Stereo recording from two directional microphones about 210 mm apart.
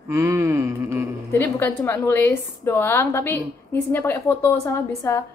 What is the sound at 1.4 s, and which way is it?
A woman's voice, 10° left (ahead or behind).